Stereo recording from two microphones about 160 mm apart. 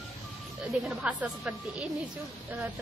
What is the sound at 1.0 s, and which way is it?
Speech, 5° right (ahead or behind).